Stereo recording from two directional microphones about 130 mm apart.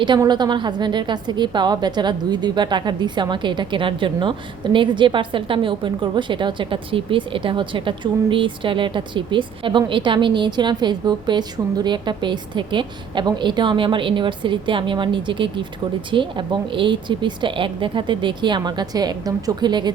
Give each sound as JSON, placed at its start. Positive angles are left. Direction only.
{"t": 0.2, "sound": "a woman's voice", "side_deg": -35}